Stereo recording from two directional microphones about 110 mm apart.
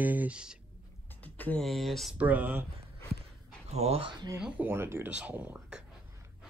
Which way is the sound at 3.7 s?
70° right (ahead or behind).